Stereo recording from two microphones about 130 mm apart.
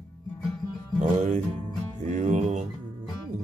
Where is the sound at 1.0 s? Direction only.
75° right (ahead or behind).